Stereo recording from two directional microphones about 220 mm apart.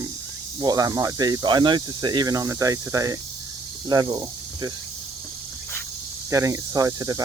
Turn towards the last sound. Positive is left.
turn(degrees=-15)  # may be behind; listen again after turning